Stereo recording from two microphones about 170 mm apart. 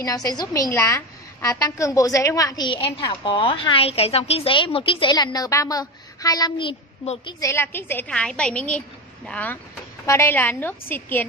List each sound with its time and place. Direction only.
0.0 s a woman's voice: 20° left (ahead or behind)
7.4 s a woman's voice: 15° left (ahead or behind)